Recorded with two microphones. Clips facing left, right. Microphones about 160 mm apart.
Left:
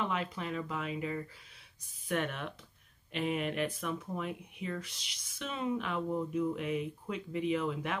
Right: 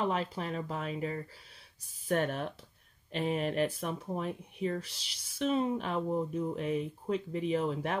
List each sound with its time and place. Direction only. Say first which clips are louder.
0.0 s speech: right 3 dB; 35° right (ahead or behind)